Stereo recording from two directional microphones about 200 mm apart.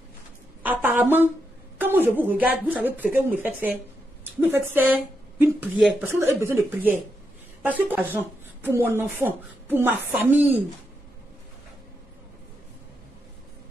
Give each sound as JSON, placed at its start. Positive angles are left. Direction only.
{"t": 0.6, "sound": "a sound", "side_deg": -10}
{"t": 1.8, "sound": "speech", "side_deg": -10}
{"t": 7.6, "sound": "speech", "side_deg": -10}